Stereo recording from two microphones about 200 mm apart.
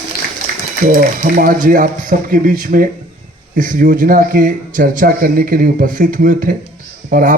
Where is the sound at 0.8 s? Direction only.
45° right (ahead or behind).